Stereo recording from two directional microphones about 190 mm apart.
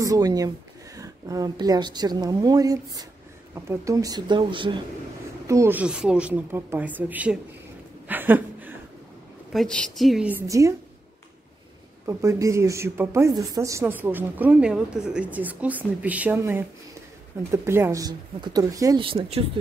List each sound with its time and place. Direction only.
0.0 s speech: 20° right (ahead or behind)
5.5 s a woman's voice: 15° right (ahead or behind)
8.1 s a sound: 10° right (ahead or behind)
9.5 s a woman's voice: centre (ahead or behind); by 10.7 s 15° right (ahead or behind)
12.1 s a woman's voice: 15° right (ahead or behind); by 19.6 s 30° right (ahead or behind)